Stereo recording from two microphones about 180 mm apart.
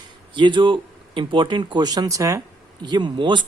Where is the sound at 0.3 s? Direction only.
25° right (ahead or behind).